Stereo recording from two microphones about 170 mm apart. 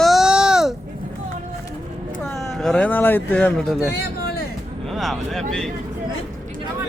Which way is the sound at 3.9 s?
75° left (ahead or behind).